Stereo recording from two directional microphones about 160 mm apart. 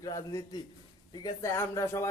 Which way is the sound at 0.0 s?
20° left (ahead or behind).